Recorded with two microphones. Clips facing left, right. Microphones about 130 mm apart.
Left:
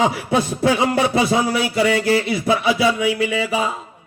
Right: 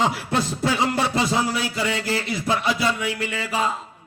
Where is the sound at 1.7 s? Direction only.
65° left (ahead or behind).